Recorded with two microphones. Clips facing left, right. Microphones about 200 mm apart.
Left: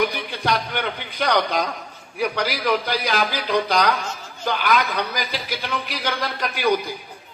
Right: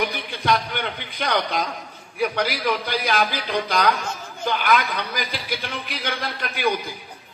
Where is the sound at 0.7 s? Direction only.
50° left (ahead or behind).